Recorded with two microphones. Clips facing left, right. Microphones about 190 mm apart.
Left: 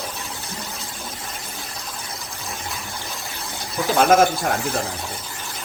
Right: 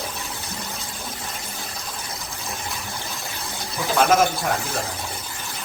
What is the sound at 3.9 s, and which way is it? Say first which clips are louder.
Speech: left 3 dB; 55° left (ahead or behind).